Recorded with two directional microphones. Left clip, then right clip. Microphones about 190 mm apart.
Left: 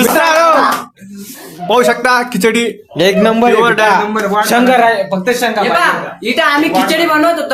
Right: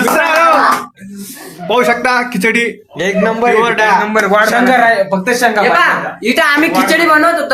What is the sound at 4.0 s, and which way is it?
Speech, 60° right (ahead or behind).